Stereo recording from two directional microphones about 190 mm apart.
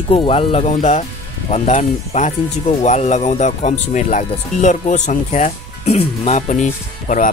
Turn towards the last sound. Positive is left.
turn(degrees=45)  # may be behind; listen again after turning